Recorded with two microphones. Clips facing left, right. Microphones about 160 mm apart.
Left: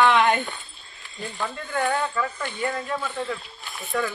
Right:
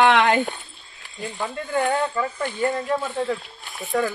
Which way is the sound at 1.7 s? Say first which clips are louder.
Right 3 dB; 25° right (ahead or behind).